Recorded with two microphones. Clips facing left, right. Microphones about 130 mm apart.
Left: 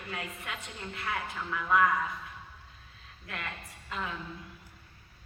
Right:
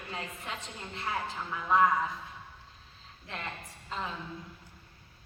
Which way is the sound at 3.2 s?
25° right (ahead or behind).